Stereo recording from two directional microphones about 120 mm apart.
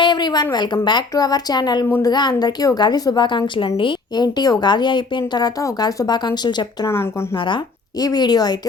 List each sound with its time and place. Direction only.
0.0 s a sound: 40° left (ahead or behind)
0.5 s a woman's voice: 40° left (ahead or behind)
6.8 s speech: 20° left (ahead or behind)
7.3 s a woman's voice: 40° left (ahead or behind)